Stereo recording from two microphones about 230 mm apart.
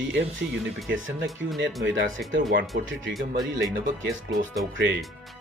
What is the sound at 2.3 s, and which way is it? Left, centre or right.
Speech, right.